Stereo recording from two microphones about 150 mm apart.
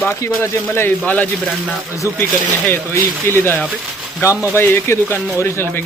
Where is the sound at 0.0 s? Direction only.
20° left (ahead or behind).